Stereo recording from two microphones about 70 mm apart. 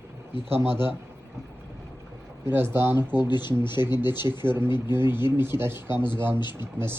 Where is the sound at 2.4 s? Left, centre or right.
Right.